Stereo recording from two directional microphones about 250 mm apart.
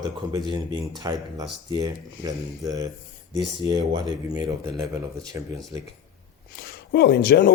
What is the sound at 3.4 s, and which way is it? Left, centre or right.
Speech, right.